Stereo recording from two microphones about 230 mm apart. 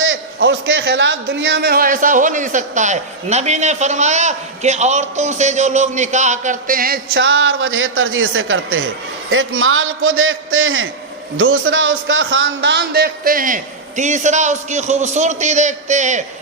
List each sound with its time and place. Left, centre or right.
0.0 s a man's voice: right